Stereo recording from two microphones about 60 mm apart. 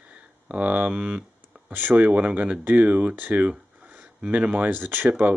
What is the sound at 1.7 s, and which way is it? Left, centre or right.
Speech, right.